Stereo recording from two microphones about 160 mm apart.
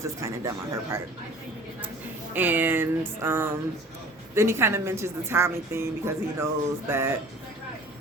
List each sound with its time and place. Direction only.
0.0 s a woman's voice: 20° right (ahead or behind)
2.3 s a woman's voice: 10° right (ahead or behind)